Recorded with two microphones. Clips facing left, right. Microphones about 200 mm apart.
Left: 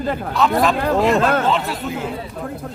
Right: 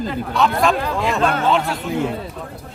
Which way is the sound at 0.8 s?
50° left (ahead or behind).